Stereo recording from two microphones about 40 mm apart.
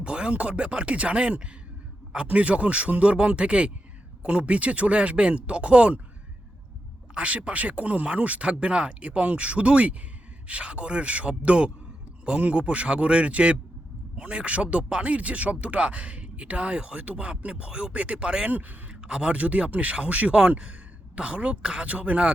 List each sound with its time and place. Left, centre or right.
0.0 s speech: right
7.1 s speech: right
18.4 s speech: right
18.9 s a woman's voice: right